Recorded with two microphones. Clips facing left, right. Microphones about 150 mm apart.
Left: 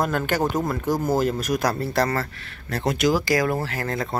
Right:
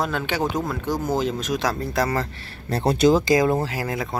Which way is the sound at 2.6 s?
30° right (ahead or behind).